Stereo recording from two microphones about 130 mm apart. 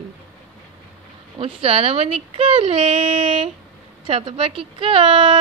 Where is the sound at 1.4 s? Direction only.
50° right (ahead or behind).